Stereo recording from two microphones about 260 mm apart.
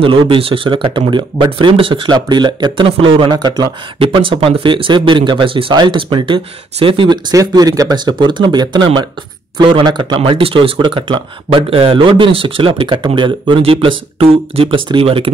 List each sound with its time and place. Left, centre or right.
0.0 s speech: centre